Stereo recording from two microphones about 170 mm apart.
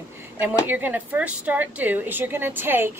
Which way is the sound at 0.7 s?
10° right (ahead or behind).